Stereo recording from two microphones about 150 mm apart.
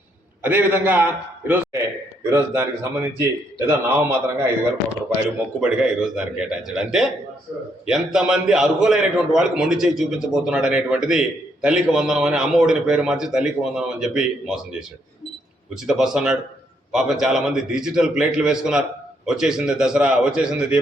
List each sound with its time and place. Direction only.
0.4 s a man's voice: 15° right (ahead or behind)
5.5 s a man's voice: 5° right (ahead or behind)